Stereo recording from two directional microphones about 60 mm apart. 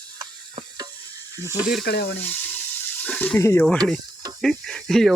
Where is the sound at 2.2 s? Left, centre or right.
Left.